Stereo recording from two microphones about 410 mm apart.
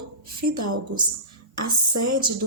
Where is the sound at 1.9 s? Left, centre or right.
Right.